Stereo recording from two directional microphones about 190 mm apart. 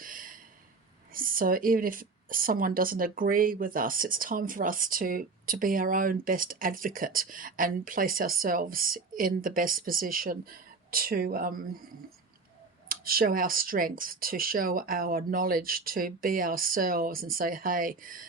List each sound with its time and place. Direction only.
0.0 s a sound: 45° right (ahead or behind)
1.1 s speech: 45° right (ahead or behind)
12.9 s speech: 50° right (ahead or behind)